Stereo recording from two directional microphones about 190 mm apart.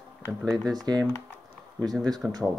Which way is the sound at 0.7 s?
20° right (ahead or behind).